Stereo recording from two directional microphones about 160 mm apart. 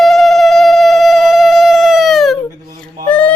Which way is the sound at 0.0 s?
Centre (ahead or behind).